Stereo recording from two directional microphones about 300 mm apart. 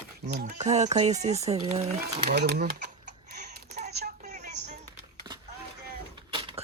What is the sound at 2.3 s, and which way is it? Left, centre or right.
Typing, right.